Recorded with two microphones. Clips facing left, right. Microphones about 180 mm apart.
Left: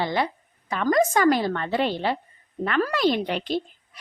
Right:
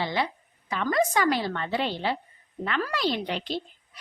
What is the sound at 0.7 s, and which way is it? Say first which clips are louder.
A woman's voice: left 4 dB; 45° left (ahead or behind).